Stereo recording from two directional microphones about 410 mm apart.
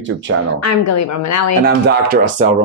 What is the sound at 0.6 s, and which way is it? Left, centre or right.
Speech, left.